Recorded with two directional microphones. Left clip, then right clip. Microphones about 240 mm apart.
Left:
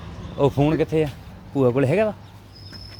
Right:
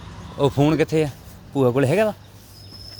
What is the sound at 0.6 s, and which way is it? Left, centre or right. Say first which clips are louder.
Speech: right 1 dB; right.